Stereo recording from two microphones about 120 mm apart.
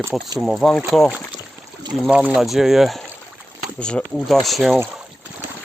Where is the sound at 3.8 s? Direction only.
10° left (ahead or behind).